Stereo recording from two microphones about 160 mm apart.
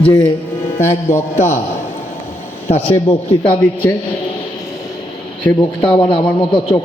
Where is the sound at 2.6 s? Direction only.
40° left (ahead or behind).